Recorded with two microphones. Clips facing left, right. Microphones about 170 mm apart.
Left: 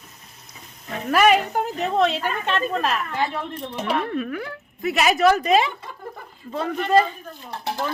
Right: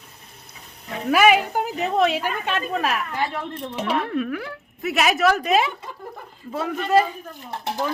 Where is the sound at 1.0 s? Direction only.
5° right (ahead or behind).